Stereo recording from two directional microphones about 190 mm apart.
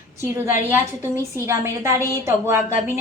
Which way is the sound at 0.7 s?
15° right (ahead or behind).